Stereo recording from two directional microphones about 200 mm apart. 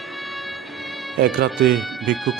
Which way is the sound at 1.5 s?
Centre (ahead or behind).